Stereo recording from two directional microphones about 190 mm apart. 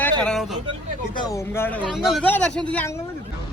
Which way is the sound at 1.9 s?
Centre (ahead or behind).